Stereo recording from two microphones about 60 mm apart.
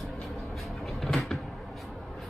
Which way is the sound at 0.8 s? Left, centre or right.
Centre.